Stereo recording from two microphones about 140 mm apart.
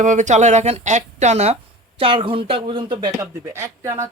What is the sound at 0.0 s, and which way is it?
Speech, 60° right (ahead or behind).